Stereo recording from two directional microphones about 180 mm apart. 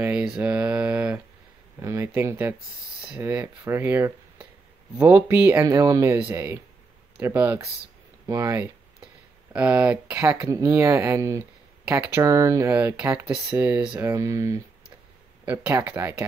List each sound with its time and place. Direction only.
0.0 s speech: 5° right (ahead or behind)
9.5 s speech: 5° right (ahead or behind)